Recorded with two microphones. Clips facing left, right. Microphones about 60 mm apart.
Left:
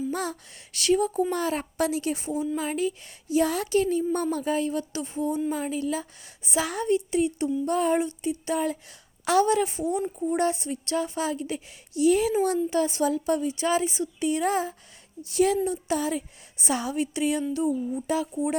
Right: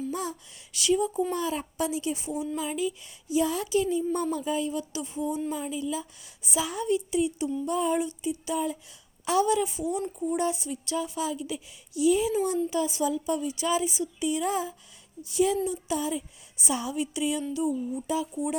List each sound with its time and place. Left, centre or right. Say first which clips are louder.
0.1 s speech: left 3 dB; left
1.3 s speech: left 2 dB; left
2.3 s speech: left 6 dB; centre
2.6 s a woman's voice: left 2 dB; left
6.8 s a woman's voice: left 2 dB; left
10.0 s speech: left 2 dB; left
10.3 s a woman's voice: left 4 dB; left
18.1 s speech: left 3 dB; left